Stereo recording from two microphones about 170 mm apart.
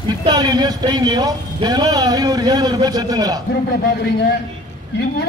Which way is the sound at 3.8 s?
75° left (ahead or behind).